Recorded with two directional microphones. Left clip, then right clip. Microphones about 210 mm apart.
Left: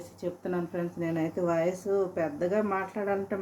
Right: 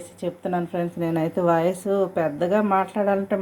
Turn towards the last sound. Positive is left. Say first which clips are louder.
# right 8 dB
turn(degrees=-15)  # may be behind; listen again after turning